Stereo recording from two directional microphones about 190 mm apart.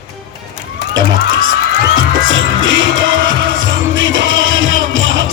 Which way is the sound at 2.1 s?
90° right.